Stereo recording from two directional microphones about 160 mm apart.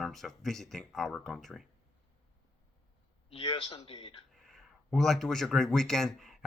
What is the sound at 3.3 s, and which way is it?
Speech, 35° left (ahead or behind).